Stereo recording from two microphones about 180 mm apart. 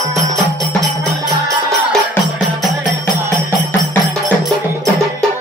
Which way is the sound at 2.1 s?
Centre (ahead or behind).